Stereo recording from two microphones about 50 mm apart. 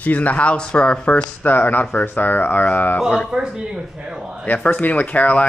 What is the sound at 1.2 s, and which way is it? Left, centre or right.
Speech, left.